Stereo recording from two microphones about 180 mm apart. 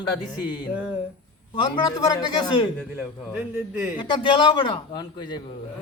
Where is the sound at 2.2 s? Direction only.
25° left (ahead or behind).